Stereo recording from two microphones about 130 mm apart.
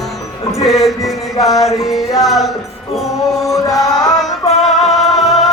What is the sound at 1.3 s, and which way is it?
Music, 25° left (ahead or behind).